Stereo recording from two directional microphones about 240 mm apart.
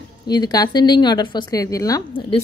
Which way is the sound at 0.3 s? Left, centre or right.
Centre.